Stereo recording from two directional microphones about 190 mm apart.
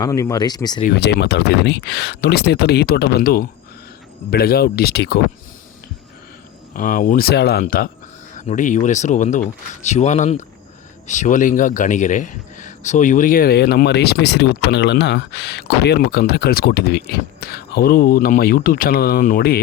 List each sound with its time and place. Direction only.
0.0 s speech: 15° left (ahead or behind)
0.9 s speech: 60° left (ahead or behind)
6.7 s a man's voice: 45° left (ahead or behind)